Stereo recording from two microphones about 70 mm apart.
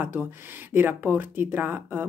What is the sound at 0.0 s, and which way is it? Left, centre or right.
Speech, right.